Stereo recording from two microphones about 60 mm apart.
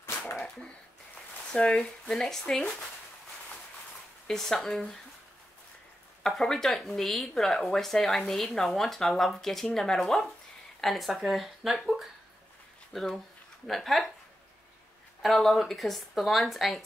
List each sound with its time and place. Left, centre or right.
1.5 s speech: centre
2.1 s speech: centre
4.3 s speech: centre
6.2 s speech: centre
15.2 s speech: centre